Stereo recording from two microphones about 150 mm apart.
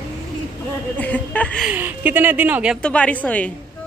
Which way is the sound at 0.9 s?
10° left (ahead or behind).